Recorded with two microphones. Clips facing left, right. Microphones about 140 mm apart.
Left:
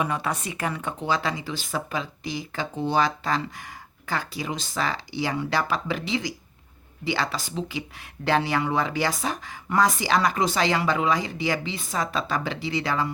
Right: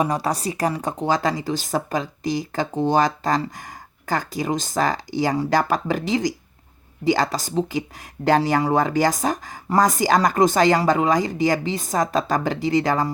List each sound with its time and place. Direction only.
0.0 s speech: 35° right (ahead or behind)